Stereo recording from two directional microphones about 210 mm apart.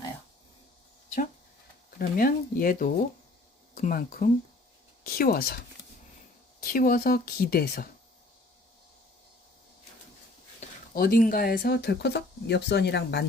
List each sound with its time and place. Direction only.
2.0 s speech: 40° left (ahead or behind)
6.6 s speech: 45° left (ahead or behind)
10.6 s a sound: 35° left (ahead or behind)
10.9 s speech: 45° left (ahead or behind)